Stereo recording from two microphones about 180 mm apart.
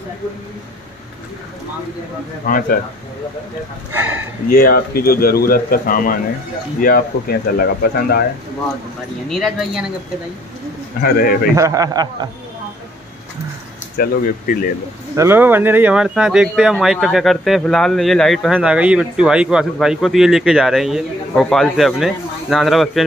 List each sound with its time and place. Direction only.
2.4 s speech: 55° left (ahead or behind)
3.9 s speech: 10° right (ahead or behind)
4.5 s speech: 55° left (ahead or behind)
9.3 s speech: centre (ahead or behind)
11.0 s speech: 55° left (ahead or behind)
11.5 s a man's voice: 20° right (ahead or behind)
13.9 s speech: 50° left (ahead or behind)
15.1 s speech: 15° right (ahead or behind)